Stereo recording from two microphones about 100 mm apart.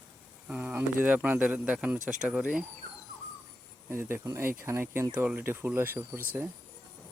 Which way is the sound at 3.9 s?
25° right (ahead or behind).